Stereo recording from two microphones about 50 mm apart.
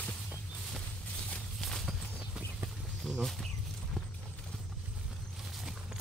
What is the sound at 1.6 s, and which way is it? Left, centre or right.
Horse, centre.